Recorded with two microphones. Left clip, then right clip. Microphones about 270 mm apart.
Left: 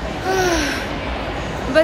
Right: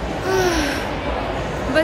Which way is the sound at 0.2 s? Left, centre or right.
Centre.